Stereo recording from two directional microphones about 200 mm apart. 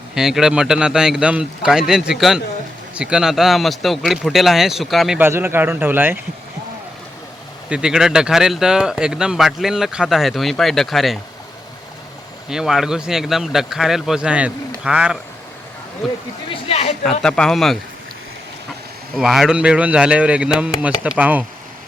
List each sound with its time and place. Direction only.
0.1 s speech: 5° right (ahead or behind)
7.7 s speech: 5° right (ahead or behind)
12.5 s speech: centre (ahead or behind)
16.5 s speech: 30° left (ahead or behind)
17.0 s speech: 5° left (ahead or behind)
19.1 s speech: centre (ahead or behind)